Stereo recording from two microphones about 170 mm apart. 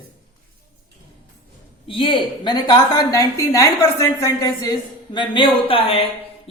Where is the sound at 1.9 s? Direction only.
30° left (ahead or behind).